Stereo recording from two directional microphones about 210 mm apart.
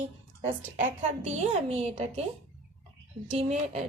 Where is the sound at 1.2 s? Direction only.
30° right (ahead or behind).